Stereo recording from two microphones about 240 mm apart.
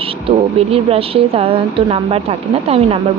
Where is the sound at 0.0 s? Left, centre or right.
Right.